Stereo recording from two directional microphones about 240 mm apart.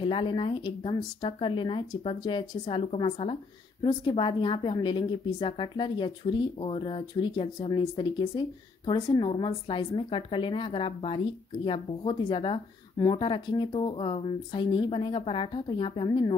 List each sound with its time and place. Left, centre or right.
0.0 s a woman's voice: left